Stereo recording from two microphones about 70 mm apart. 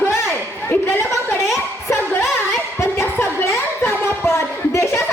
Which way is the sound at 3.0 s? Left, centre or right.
Left.